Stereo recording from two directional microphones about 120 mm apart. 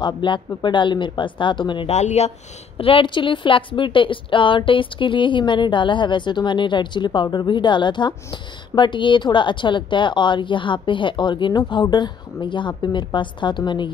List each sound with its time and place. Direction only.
0.0 s a woman's voice: 40° left (ahead or behind)
1.9 s speech: 70° left (ahead or behind)
2.8 s a woman's voice: 45° left (ahead or behind)